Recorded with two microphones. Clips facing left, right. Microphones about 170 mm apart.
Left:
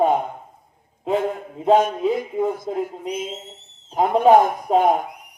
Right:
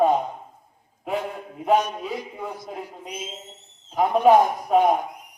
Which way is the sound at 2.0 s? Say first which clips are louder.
Left 10 dB; 25° left (ahead or behind).